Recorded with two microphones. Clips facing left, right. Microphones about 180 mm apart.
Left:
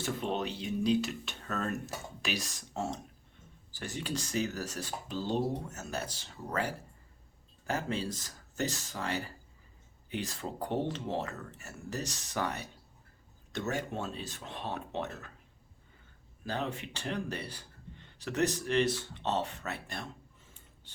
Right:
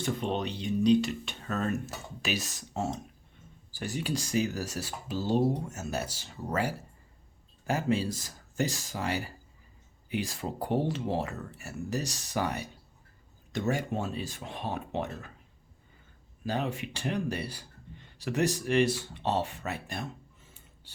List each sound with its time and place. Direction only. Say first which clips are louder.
0.0 s speech: right 3 dB; 5° left (ahead or behind)
16.4 s speech: right 4 dB; 10° right (ahead or behind)